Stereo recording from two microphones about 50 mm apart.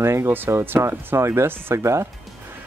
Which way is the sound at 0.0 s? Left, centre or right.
Right.